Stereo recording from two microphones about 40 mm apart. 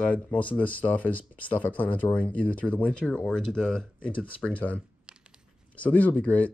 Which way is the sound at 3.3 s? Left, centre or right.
Centre.